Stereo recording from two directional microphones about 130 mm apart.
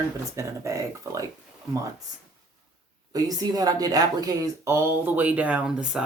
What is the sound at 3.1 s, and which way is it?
Speech, 30° right (ahead or behind).